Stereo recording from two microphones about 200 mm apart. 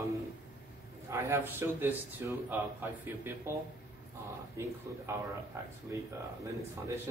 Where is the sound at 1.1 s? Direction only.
10° right (ahead or behind).